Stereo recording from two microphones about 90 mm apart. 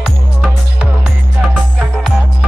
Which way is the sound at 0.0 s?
10° right (ahead or behind).